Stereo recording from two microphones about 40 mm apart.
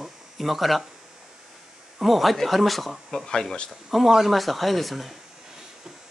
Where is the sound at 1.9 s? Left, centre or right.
Centre.